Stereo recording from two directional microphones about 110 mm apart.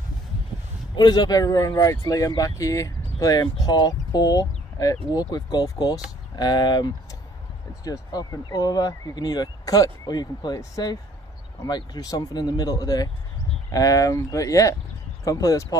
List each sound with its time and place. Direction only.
0.9 s speech: 40° left (ahead or behind)